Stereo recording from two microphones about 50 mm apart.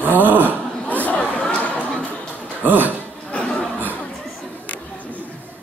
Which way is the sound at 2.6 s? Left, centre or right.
Right.